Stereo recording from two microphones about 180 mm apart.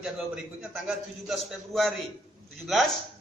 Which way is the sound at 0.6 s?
5° right (ahead or behind).